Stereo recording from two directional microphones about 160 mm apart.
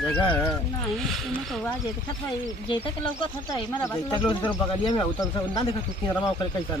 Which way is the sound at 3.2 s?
30° left (ahead or behind).